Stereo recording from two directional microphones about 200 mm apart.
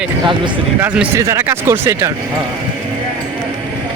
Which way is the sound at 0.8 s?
10° right (ahead or behind).